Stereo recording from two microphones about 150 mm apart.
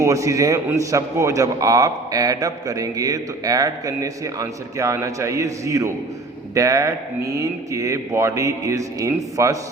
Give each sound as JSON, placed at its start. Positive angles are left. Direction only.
{"t": 0.0, "sound": "a man's voice", "side_deg": -20}